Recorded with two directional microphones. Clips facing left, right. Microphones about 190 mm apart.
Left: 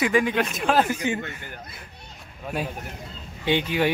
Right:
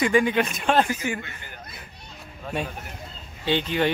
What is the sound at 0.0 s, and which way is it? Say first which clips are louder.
Speech: right 1 dB; centre (ahead or behind).